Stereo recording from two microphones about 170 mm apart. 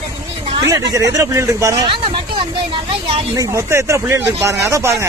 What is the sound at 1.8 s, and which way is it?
Speech, 30° right (ahead or behind).